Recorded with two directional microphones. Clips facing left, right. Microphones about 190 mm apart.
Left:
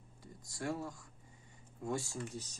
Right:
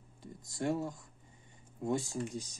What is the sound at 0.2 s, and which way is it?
Speech, 25° right (ahead or behind).